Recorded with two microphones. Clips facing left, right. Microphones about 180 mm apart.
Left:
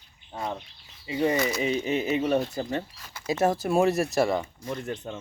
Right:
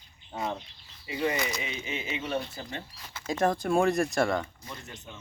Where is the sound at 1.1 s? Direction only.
25° left (ahead or behind).